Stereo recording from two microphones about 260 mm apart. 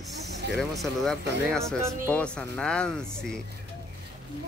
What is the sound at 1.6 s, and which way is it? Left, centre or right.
Speech, centre.